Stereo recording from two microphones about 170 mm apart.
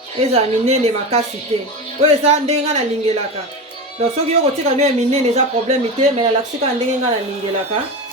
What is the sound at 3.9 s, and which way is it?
A woman's voice, 40° right (ahead or behind).